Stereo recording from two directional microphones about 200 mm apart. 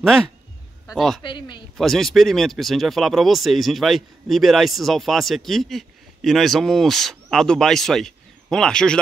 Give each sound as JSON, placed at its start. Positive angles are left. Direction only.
{"t": 0.0, "sound": "speech", "side_deg": 0}
{"t": 1.2, "sound": "speech", "side_deg": 25}
{"t": 1.8, "sound": "speech", "side_deg": 0}